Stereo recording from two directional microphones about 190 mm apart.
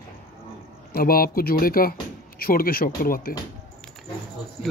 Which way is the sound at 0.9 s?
50° left (ahead or behind).